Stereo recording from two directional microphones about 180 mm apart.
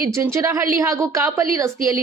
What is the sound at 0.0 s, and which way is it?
A woman's voice, 15° right (ahead or behind).